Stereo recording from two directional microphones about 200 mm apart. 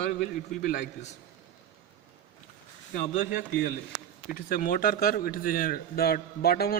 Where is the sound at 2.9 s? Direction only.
40° left (ahead or behind).